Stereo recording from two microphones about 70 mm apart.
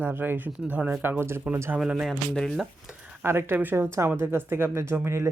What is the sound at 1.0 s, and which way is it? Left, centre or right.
Speech, right.